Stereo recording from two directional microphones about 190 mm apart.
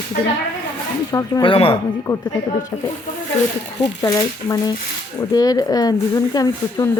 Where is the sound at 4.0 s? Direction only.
20° left (ahead or behind).